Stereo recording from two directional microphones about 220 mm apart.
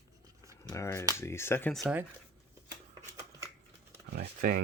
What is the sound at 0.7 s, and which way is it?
Speech, 15° left (ahead or behind).